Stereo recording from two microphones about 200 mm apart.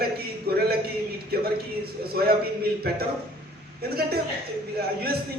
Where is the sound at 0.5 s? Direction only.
50° right (ahead or behind).